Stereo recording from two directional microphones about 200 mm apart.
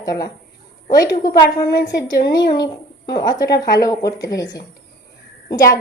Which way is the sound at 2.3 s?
20° left (ahead or behind).